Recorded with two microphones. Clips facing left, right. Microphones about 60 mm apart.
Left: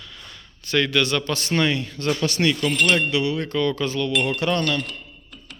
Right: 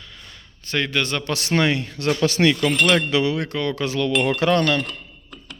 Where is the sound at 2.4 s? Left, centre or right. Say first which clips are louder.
Right 2 dB; right.